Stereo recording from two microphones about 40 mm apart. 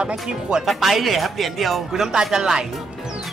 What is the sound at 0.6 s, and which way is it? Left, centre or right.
Speech, centre.